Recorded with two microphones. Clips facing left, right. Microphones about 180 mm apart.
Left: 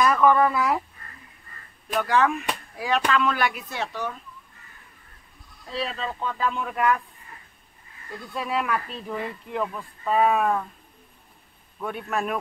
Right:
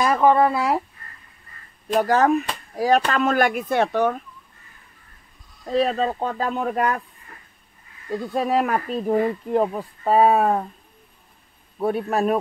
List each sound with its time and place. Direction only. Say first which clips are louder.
0.0 s speech: right 2 dB; 30° right (ahead or behind)
2.0 s speech: right 5 dB; 40° right (ahead or behind); by 4.2 s 55° right (ahead or behind)
5.7 s speech: right 10 dB; 50° right (ahead or behind)
8.1 s speech: right 8 dB; 45° right (ahead or behind)
11.8 s speech: right 7 dB; 35° right (ahead or behind)